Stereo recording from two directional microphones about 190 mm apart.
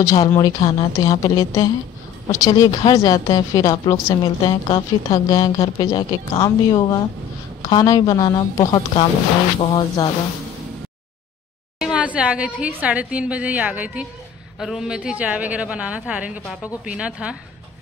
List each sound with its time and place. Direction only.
0.0 s a woman's voice: 15° left (ahead or behind)
11.8 s a woman's voice: 5° right (ahead or behind)